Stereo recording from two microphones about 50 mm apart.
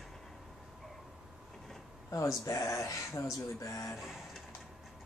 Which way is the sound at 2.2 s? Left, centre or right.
Left.